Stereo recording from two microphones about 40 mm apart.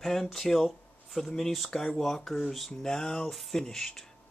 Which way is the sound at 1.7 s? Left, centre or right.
Centre.